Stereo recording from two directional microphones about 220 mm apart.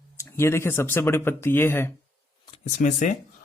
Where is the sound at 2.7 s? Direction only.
35° left (ahead or behind).